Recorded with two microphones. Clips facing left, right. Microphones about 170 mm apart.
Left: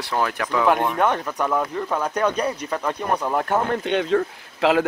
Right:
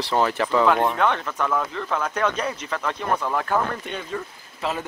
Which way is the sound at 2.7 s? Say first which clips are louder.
Left 2 dB; 15° left (ahead or behind).